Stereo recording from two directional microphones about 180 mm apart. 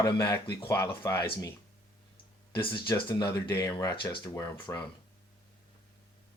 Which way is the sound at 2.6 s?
25° left (ahead or behind).